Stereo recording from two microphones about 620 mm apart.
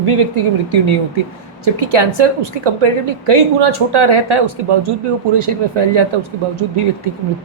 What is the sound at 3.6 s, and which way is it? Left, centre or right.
Speech, right.